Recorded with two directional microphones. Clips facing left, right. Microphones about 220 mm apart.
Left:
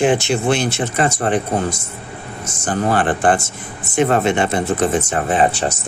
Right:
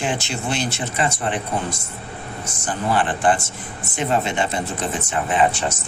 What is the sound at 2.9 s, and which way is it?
Speech, 45° left (ahead or behind).